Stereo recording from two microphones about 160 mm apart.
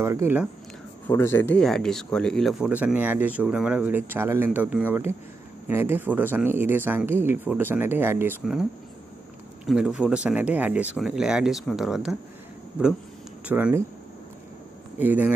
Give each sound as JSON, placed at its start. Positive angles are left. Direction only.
{"t": 0.0, "sound": "speech", "side_deg": -15}
{"t": 1.0, "sound": "speech", "side_deg": 15}
{"t": 1.6, "sound": "speech", "side_deg": 5}
{"t": 2.7, "sound": "speech", "side_deg": -10}
{"t": 9.7, "sound": "speech", "side_deg": -5}
{"t": 13.5, "sound": "speech", "side_deg": -10}
{"t": 15.0, "sound": "speech", "side_deg": -10}